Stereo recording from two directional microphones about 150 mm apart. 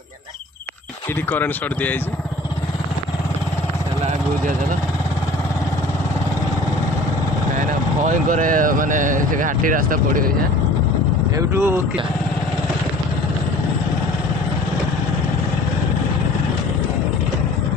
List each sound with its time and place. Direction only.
1.3 s speech: 10° left (ahead or behind)
8.1 s speech: 60° right (ahead or behind)
11.3 s speech: 20° right (ahead or behind)